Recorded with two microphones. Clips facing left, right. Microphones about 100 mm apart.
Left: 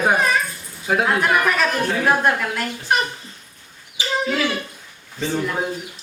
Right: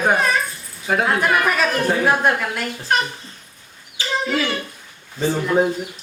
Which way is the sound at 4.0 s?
15° left (ahead or behind).